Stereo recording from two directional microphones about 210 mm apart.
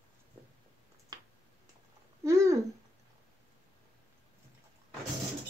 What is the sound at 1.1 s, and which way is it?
Finger snapping, 20° right (ahead or behind).